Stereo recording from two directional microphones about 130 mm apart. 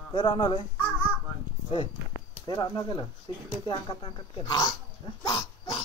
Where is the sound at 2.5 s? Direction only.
30° left (ahead or behind).